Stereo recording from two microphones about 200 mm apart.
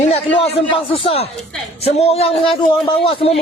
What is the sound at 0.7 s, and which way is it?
A man's voice, 30° left (ahead or behind).